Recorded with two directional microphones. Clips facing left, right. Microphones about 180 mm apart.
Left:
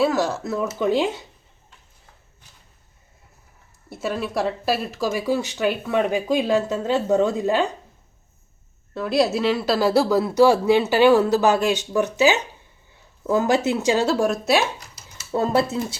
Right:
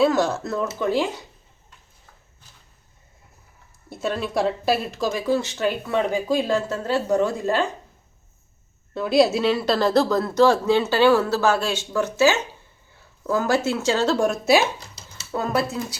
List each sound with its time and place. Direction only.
0.0 s speech: 5° left (ahead or behind)
0.8 s speech: 20° left (ahead or behind)
3.8 s speech: 5° left (ahead or behind)
9.0 s speech: centre (ahead or behind)
14.8 s a sound: 30° right (ahead or behind)
15.3 s speech: 25° left (ahead or behind)